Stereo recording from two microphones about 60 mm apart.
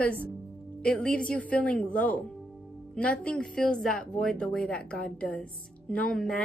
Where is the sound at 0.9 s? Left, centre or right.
Centre.